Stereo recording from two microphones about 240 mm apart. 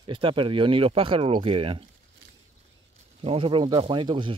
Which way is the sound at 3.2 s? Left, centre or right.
Right.